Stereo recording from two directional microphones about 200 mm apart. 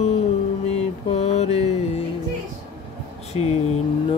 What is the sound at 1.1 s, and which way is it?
Mantra, 35° left (ahead or behind).